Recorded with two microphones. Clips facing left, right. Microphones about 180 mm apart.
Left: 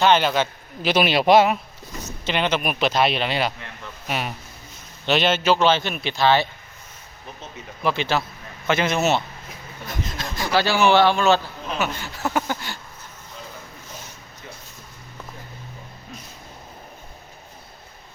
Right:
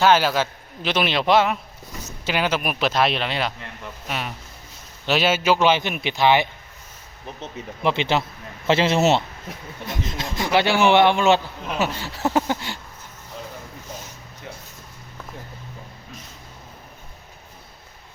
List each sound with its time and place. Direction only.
0.0 s speech: 5° right (ahead or behind)
0.8 s a man's voice: 10° left (ahead or behind)
2.2 s speech: 5° right (ahead or behind)
5.0 s speech: 5° right (ahead or behind)
7.8 s speech: 20° right (ahead or behind)